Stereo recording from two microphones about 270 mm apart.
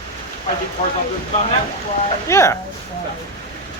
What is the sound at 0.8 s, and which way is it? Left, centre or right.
Speech, left.